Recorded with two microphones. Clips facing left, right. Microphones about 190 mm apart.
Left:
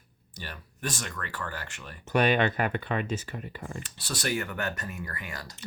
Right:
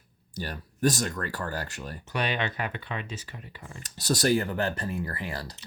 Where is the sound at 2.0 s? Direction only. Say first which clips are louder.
Left 6 dB; 50° left (ahead or behind).